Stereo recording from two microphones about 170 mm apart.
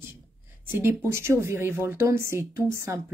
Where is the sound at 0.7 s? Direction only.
15° right (ahead or behind).